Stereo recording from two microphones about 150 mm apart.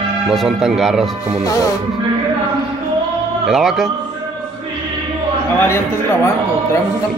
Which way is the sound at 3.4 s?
Centre (ahead or behind).